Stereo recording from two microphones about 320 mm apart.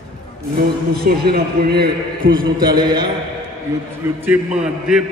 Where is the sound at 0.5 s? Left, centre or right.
Right.